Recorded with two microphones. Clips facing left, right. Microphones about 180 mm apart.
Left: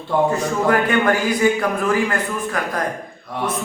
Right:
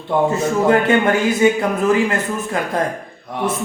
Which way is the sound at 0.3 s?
25° right (ahead or behind).